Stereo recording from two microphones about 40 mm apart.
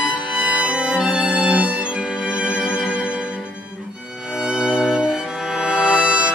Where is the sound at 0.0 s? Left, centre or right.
Centre.